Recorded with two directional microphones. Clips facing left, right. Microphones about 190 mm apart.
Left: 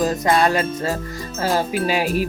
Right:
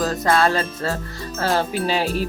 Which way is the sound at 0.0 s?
15° left (ahead or behind).